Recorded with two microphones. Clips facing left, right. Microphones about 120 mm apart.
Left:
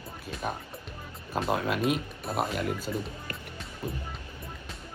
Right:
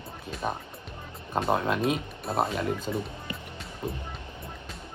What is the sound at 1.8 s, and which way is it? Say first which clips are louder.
Speech: right 1 dB; centre (ahead or behind).